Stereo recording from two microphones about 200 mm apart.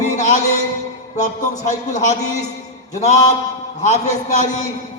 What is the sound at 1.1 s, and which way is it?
A man's voice, 35° left (ahead or behind).